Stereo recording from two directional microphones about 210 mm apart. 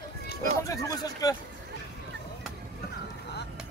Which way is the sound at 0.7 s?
15° left (ahead or behind).